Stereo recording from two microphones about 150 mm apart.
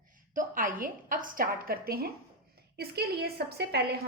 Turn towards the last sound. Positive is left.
turn(degrees=-90)